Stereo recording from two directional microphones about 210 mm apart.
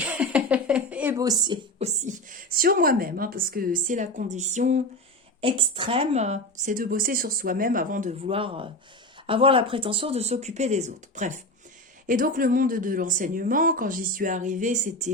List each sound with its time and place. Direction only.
0.0 s speech: 5° right (ahead or behind)
2.0 s speech: 40° right (ahead or behind)
8.2 s speech: 25° right (ahead or behind)